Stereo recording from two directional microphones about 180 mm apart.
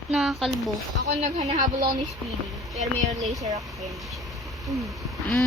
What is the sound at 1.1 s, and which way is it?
Speech, 40° right (ahead or behind).